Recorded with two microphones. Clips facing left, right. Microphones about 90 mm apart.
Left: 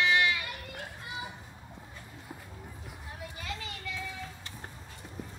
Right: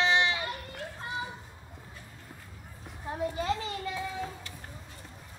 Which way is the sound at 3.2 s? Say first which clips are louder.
Right 11 dB; 30° right (ahead or behind).